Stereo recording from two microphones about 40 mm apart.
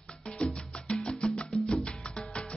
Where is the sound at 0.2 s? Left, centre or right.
Left.